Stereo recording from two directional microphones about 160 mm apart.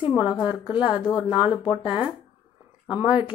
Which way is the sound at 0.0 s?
30° left (ahead or behind).